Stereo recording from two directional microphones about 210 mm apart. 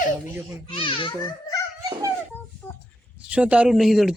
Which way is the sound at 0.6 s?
25° left (ahead or behind).